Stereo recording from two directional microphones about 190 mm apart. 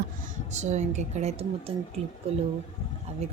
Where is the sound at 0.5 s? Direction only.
35° right (ahead or behind).